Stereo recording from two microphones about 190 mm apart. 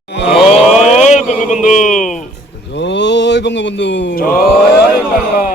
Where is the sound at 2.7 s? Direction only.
65° left (ahead or behind); by 4.4 s 50° left (ahead or behind).